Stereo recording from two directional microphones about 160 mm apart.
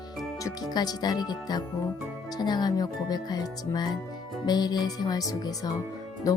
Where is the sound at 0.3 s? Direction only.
20° left (ahead or behind).